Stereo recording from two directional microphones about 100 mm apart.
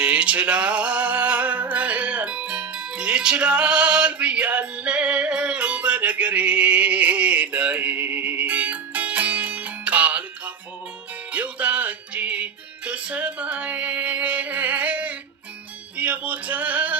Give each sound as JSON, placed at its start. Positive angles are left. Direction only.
{"t": 0.0, "sound": "music", "side_deg": -10}